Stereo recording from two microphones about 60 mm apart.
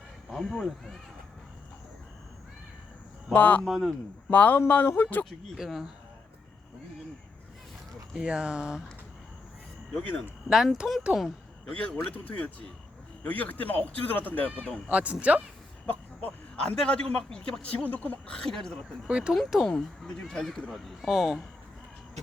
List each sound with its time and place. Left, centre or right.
0.3 s speech: centre
3.3 s speech: left
3.6 s speech: centre
4.3 s speech: left
5.5 s speech: centre
8.1 s speech: centre
10.5 s speech: centre
11.8 s speech: centre
14.8 s speech: right
16.6 s a man's voice: centre
18.3 s a man's voice: centre
19.0 s speech: centre
19.3 s speech: centre
19.6 s a man's voice: centre